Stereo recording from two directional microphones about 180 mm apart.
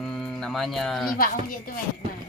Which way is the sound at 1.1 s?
55° left (ahead or behind).